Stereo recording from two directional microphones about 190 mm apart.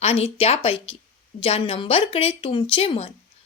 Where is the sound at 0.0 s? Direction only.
30° left (ahead or behind).